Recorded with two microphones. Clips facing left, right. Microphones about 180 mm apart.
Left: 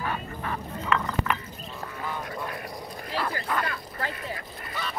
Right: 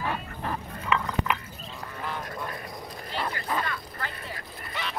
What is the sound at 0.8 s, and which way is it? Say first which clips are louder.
Glass: even; 10° right (ahead or behind).